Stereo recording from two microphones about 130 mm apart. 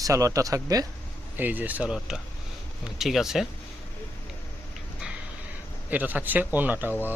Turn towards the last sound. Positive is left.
turn(degrees=-15)  # may be behind; listen again after turning